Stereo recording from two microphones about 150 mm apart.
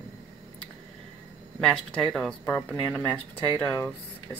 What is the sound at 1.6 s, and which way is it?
Speech, 5° left (ahead or behind).